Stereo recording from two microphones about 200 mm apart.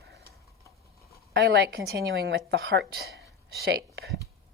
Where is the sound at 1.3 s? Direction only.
55° right (ahead or behind).